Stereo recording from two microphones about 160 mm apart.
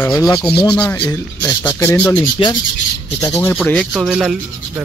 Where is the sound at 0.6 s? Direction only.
5° left (ahead or behind).